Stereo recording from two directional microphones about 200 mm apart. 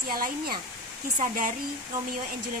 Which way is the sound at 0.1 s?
45° right (ahead or behind).